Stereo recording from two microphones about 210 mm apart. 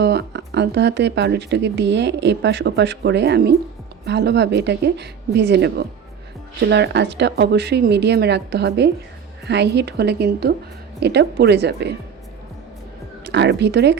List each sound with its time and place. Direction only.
0.0 s a woman's voice: 55° right (ahead or behind)
13.2 s speech: 55° right (ahead or behind)